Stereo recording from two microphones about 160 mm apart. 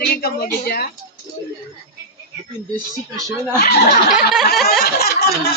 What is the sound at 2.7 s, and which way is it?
Speech, 20° right (ahead or behind).